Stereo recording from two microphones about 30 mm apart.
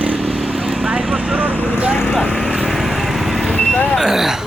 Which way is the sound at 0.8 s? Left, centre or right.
Centre.